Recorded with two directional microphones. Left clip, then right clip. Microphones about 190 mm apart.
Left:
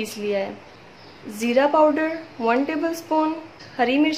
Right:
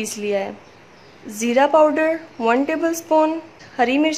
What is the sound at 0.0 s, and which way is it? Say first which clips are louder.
A woman's voice: right 2 dB; 25° right (ahead or behind).